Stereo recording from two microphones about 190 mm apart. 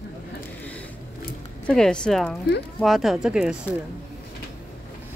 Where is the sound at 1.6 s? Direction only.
5° left (ahead or behind).